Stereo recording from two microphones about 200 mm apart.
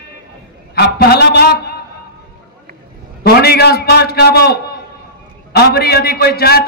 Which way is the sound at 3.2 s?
50° left (ahead or behind).